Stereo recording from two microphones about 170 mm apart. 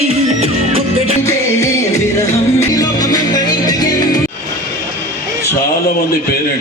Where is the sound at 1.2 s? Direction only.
15° left (ahead or behind).